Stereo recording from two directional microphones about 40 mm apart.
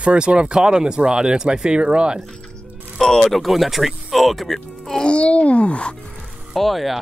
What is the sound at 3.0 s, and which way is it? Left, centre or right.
Speech, centre.